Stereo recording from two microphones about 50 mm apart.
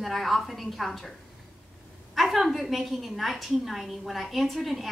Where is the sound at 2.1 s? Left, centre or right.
Centre.